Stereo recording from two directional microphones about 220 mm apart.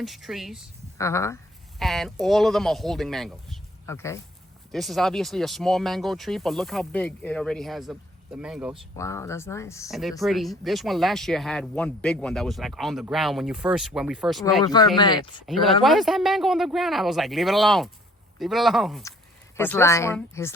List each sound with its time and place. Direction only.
0.0 s speech: centre (ahead or behind)
0.9 s speech: 15° left (ahead or behind)
1.8 s speech: centre (ahead or behind)
3.8 s speech: 10° left (ahead or behind)
4.7 s speech: centre (ahead or behind)
9.0 s speech: 15° left (ahead or behind)
9.9 s speech: centre (ahead or behind)
14.6 s speech: 20° left (ahead or behind)
15.4 s speech: centre (ahead or behind)